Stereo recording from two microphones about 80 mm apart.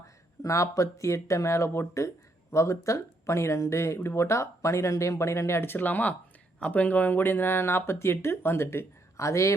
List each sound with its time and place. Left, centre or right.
0.0 s speech: left